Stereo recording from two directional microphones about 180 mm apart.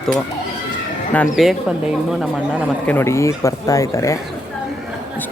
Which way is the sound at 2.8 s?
15° left (ahead or behind).